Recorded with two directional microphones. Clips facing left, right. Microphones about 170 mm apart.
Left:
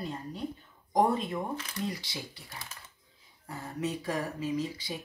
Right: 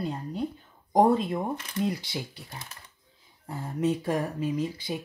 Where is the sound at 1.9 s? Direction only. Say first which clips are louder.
Right 6 dB; 55° right (ahead or behind).